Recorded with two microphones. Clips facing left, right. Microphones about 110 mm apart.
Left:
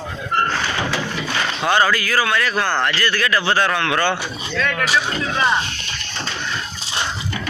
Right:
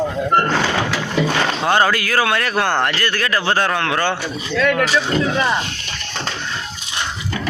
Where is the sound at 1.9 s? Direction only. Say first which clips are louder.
Right 1 dB; 60° right (ahead or behind); by 4.2 s 35° right (ahead or behind).